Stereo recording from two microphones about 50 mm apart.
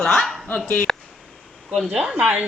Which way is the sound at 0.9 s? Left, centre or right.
Centre.